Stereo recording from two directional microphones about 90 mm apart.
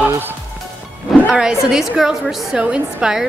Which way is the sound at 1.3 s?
10° right (ahead or behind).